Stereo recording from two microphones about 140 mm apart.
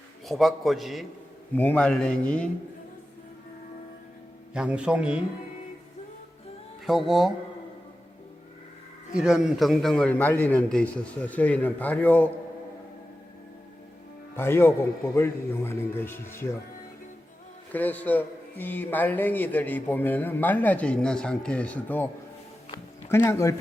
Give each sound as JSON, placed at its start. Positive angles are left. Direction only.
{"t": 0.3, "sound": "a man's voice", "side_deg": 0}
{"t": 1.5, "sound": "a man's voice", "side_deg": 10}
{"t": 4.5, "sound": "a man's voice", "side_deg": -5}
{"t": 6.8, "sound": "a man's voice", "side_deg": 0}
{"t": 9.1, "sound": "a man's voice", "side_deg": -5}
{"t": 14.3, "sound": "a man's voice", "side_deg": 20}
{"t": 17.7, "sound": "a man's voice", "side_deg": 10}